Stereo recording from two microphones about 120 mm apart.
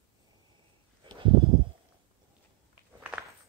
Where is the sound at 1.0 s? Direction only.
45° right (ahead or behind).